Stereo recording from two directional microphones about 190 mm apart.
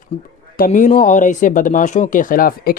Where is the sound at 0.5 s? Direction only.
45° left (ahead or behind).